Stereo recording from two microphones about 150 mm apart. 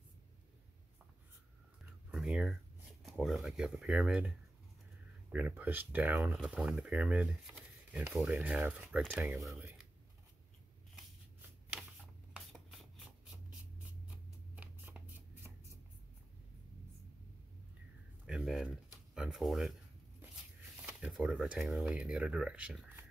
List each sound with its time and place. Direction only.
2.0 s speech: 5° right (ahead or behind)
5.3 s speech: 10° right (ahead or behind)
12.4 s rub: centre (ahead or behind)
14.1 s a sound: 10° right (ahead or behind)
18.2 s a sound: centre (ahead or behind)
19.1 s speech: 5° right (ahead or behind)
20.8 s speech: 10° right (ahead or behind)